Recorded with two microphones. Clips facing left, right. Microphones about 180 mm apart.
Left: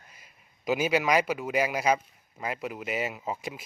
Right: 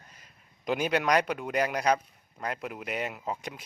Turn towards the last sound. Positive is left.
turn(degrees=5)  # may be behind; listen again after turning